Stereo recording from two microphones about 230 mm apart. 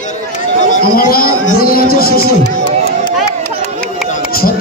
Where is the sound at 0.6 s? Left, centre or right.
Left.